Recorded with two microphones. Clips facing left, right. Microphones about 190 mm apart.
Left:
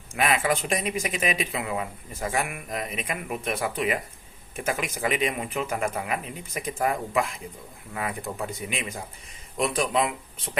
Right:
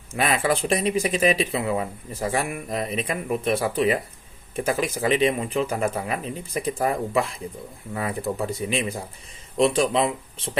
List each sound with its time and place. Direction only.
0.1 s speech: 35° right (ahead or behind)